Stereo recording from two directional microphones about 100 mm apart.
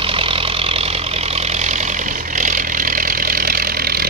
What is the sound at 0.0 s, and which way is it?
Vehicle, 65° right (ahead or behind).